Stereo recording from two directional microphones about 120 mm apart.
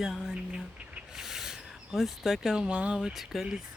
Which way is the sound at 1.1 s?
5° right (ahead or behind).